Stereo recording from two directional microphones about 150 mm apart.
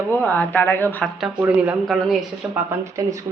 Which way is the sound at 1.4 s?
10° right (ahead or behind).